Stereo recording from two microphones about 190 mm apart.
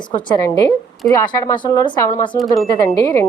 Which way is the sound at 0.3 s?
20° left (ahead or behind).